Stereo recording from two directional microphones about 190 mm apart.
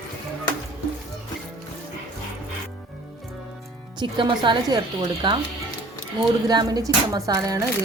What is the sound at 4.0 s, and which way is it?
Speech, 25° right (ahead or behind).